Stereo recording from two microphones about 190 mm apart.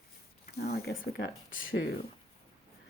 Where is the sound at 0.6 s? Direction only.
55° left (ahead or behind).